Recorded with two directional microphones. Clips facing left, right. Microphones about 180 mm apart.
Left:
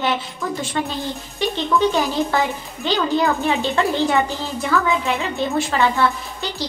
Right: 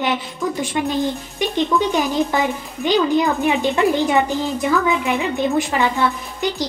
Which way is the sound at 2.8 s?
15° right (ahead or behind).